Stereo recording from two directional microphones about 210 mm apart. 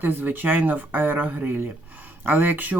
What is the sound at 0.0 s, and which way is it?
Speech, 10° right (ahead or behind).